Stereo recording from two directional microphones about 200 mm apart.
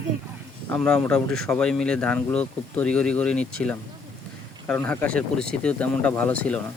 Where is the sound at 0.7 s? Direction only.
5° left (ahead or behind).